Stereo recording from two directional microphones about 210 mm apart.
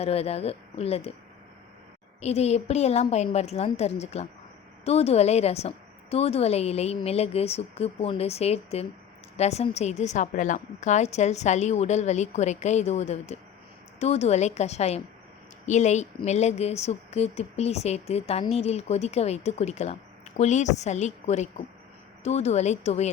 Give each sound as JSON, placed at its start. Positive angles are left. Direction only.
{"t": 0.0, "sound": "a woman's voice", "side_deg": 30}
{"t": 2.2, "sound": "a woman's voice", "side_deg": 30}